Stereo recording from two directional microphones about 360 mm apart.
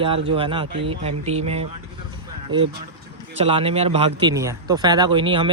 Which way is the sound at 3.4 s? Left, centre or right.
Centre.